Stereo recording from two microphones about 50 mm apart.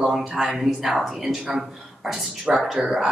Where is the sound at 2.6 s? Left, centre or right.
Centre.